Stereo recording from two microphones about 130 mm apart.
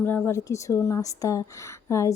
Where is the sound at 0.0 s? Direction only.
15° left (ahead or behind).